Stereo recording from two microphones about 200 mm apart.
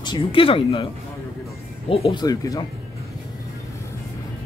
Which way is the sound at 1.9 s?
25° left (ahead or behind).